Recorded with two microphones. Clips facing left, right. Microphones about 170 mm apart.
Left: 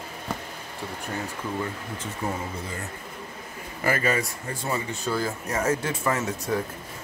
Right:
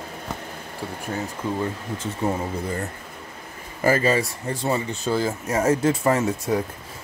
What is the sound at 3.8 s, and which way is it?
Speech, 30° right (ahead or behind).